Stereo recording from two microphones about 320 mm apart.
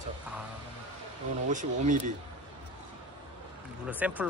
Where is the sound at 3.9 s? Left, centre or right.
Centre.